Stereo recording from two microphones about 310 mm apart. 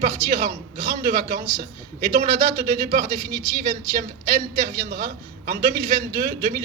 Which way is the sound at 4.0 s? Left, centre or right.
Right.